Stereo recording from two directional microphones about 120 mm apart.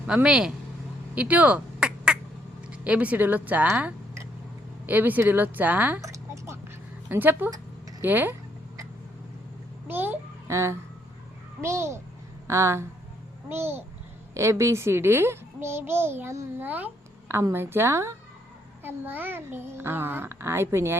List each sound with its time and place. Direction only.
0.1 s speech: 5° right (ahead or behind)
1.1 s quack: 10° right (ahead or behind)
2.6 s speech: 10° right (ahead or behind)
6.0 s a sound: 25° right (ahead or behind)
7.1 s speech: 15° right (ahead or behind)
9.8 s a sound: 15° right (ahead or behind)
11.6 s a child's voice: 25° right (ahead or behind)
16.6 s a sound: 15° right (ahead or behind)
17.5 s a child's voice: 20° right (ahead or behind)